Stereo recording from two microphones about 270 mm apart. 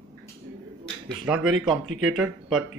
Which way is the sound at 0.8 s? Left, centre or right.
Centre.